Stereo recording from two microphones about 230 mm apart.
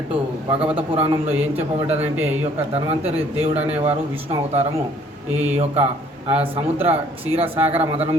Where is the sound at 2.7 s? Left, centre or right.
Right.